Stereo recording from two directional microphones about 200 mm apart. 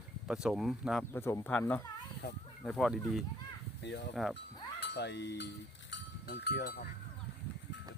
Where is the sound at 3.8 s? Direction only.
60° left (ahead or behind).